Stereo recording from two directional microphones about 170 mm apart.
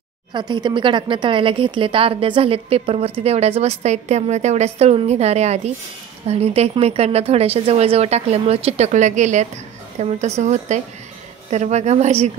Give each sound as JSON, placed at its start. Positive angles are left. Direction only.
{"t": 0.3, "sound": "speech", "side_deg": -25}